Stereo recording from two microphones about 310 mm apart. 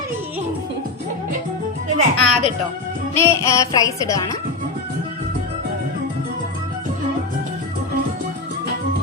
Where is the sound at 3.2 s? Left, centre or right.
Centre.